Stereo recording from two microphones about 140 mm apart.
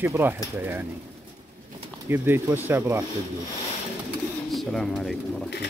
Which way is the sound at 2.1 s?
15° right (ahead or behind).